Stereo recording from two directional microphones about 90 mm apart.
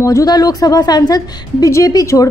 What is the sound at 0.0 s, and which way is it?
A woman's voice, 35° left (ahead or behind).